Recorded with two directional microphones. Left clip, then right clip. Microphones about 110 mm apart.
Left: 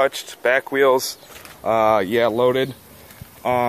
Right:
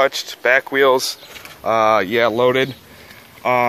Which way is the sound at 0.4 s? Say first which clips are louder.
Right 3 dB; 25° left (ahead or behind).